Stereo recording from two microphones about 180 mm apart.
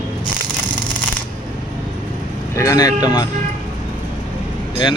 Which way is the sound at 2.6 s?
20° left (ahead or behind).